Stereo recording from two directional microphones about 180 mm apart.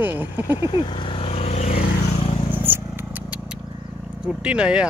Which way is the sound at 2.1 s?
30° left (ahead or behind).